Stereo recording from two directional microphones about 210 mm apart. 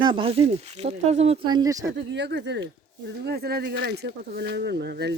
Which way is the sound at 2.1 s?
55° right (ahead or behind).